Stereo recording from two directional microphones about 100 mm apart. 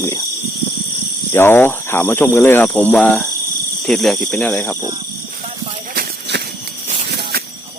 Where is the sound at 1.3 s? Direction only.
25° left (ahead or behind).